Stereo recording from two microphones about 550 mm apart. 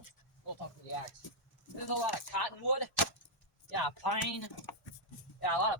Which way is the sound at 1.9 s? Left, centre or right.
Left.